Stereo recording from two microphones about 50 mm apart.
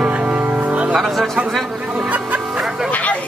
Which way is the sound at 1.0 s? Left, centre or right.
Centre.